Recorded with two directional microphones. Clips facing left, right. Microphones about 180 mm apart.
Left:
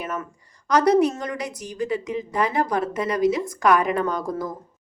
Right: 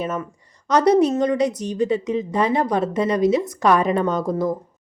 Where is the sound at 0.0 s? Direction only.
25° right (ahead or behind).